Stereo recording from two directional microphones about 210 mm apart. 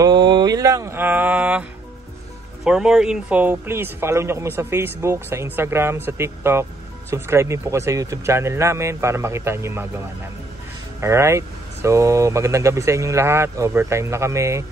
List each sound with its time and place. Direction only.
0.0 s a sound: 20° right (ahead or behind)
2.6 s speech: 5° right (ahead or behind)
11.0 s speech: 15° right (ahead or behind)